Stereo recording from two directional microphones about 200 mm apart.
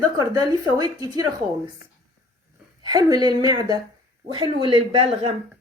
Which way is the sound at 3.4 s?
20° right (ahead or behind).